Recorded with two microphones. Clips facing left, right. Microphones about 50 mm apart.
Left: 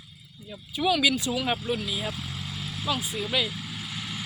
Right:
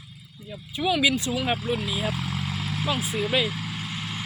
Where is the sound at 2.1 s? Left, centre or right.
Right.